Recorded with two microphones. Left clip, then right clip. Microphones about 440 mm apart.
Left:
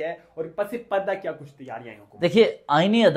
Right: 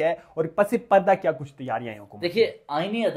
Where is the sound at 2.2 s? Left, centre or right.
Left.